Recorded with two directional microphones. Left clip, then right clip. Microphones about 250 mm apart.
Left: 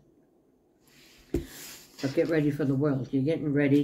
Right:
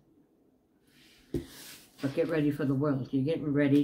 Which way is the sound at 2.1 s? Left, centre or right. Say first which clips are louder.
Left 3 dB; centre.